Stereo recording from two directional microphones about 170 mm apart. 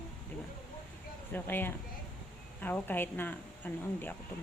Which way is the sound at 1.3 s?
10° left (ahead or behind).